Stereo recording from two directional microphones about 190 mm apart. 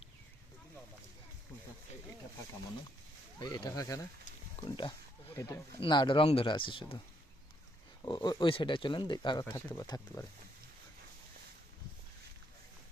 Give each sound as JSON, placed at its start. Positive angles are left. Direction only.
{"t": 3.4, "sound": "speech", "side_deg": 25}
{"t": 4.6, "sound": "speech", "side_deg": 35}
{"t": 5.3, "sound": "speech", "side_deg": 15}
{"t": 8.0, "sound": "speech", "side_deg": 20}